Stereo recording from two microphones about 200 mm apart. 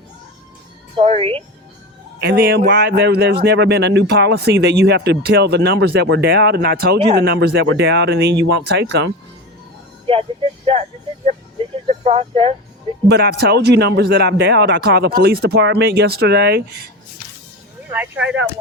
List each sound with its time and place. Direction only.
0.9 s a woman's voice: 30° right (ahead or behind)
2.2 s speech: 50° right (ahead or behind)
10.1 s speech: 30° right (ahead or behind)
11.9 s speech: 30° right (ahead or behind)
13.1 s speech: 55° right (ahead or behind)
17.9 s speech: 10° right (ahead or behind)